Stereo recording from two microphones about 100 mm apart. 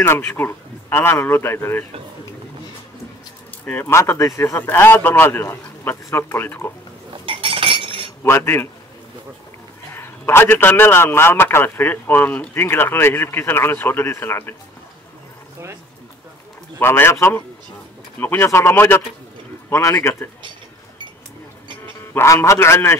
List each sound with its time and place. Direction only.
0.0 s a man's voice: 25° left (ahead or behind)
3.6 s a man's voice: 20° left (ahead or behind)
7.2 s chink: 65° right (ahead or behind)
8.2 s a man's voice: 25° left (ahead or behind)
9.9 s a man's voice: 25° left (ahead or behind)
16.8 s a man's voice: 25° left (ahead or behind)
22.1 s a man's voice: 25° left (ahead or behind)